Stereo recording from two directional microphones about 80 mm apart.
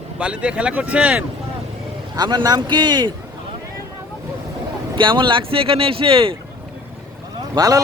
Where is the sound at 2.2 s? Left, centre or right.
Right.